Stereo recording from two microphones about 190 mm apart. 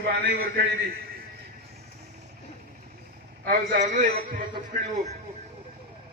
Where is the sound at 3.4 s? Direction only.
50° right (ahead or behind).